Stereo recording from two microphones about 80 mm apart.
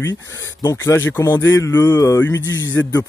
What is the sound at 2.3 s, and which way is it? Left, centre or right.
Speech, left.